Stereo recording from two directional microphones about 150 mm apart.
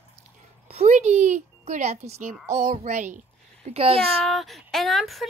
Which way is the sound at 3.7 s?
40° right (ahead or behind).